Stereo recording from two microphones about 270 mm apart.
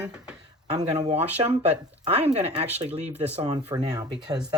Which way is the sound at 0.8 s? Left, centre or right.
Right.